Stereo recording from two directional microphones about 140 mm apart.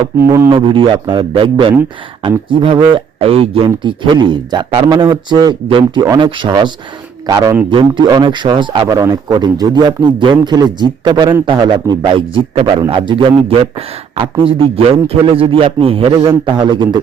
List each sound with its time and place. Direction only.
0.3 s a man's voice: 20° right (ahead or behind)
0.5 s a man's voice: 40° right (ahead or behind)